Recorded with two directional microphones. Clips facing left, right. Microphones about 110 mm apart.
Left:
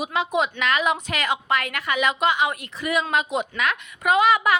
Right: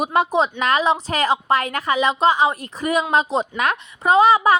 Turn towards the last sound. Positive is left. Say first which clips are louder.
# right 4 dB
turn(degrees=-35)  # may be behind; listen again after turning